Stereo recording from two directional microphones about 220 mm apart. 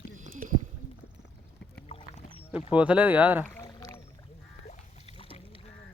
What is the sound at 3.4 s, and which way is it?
Boat, 10° left (ahead or behind).